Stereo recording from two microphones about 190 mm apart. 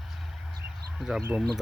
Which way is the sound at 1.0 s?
Centre (ahead or behind).